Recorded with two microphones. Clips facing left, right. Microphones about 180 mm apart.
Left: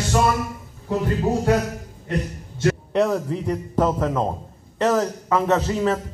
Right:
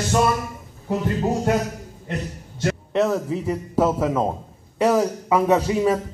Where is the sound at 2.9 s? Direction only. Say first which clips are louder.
Even; centre (ahead or behind).